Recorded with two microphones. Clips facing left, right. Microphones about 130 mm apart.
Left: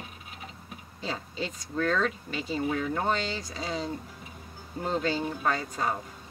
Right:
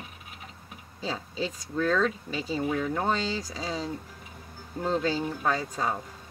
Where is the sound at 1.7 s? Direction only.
Centre (ahead or behind).